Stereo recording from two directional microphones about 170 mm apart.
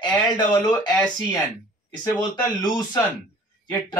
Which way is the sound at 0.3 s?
25° left (ahead or behind).